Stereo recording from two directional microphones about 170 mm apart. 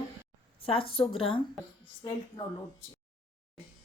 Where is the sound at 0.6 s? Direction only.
35° left (ahead or behind).